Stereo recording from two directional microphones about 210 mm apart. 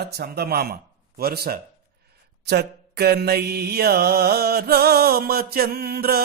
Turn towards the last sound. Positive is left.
turn(degrees=-50)  # may be behind; listen again after turning